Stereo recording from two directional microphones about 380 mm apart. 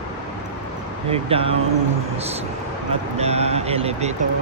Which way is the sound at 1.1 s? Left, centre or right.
Centre.